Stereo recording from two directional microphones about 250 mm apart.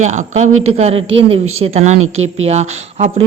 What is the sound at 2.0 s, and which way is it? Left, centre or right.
Speech, right.